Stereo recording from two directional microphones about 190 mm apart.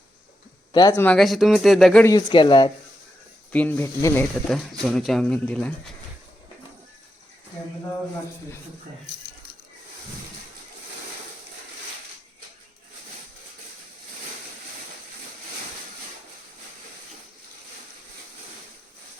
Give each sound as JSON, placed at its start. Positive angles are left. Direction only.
{"t": 0.7, "sound": "speech", "side_deg": 20}
{"t": 1.0, "sound": "speech", "side_deg": 0}
{"t": 2.0, "sound": "speech", "side_deg": 25}
{"t": 3.5, "sound": "speech", "side_deg": 10}